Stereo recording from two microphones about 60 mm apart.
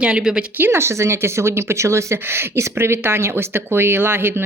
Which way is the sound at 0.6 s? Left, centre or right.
Right.